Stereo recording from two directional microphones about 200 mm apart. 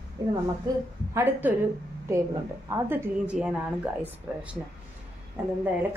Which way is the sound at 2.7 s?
10° right (ahead or behind).